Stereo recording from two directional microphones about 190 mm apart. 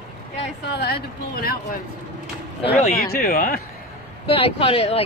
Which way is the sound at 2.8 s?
50° left (ahead or behind).